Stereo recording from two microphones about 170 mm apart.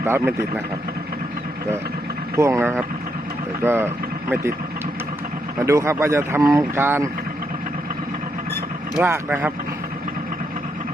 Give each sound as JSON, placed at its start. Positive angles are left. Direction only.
{"t": 0.0, "sound": "speech", "side_deg": -15}
{"t": 2.3, "sound": "speech", "side_deg": -15}
{"t": 5.5, "sound": "speech", "side_deg": -15}
{"t": 9.0, "sound": "speech", "side_deg": -15}